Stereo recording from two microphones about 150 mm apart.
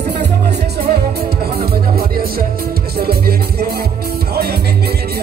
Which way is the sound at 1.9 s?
90° right.